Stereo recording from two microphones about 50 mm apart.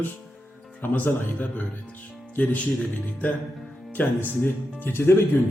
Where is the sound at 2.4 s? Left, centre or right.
Left.